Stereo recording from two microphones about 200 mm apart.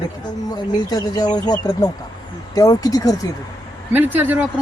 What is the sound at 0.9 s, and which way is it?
Speech, 20° left (ahead or behind).